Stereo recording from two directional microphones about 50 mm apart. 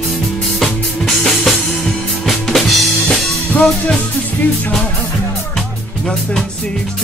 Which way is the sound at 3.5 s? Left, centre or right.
Centre.